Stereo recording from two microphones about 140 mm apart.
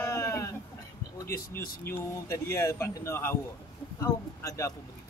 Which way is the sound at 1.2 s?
90° left.